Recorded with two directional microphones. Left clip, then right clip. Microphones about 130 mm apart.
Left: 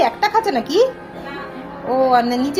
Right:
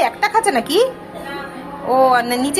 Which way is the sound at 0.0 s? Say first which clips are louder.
Even; 15° left (ahead or behind).